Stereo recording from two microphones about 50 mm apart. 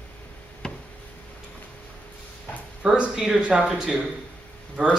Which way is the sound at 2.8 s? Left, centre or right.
Centre.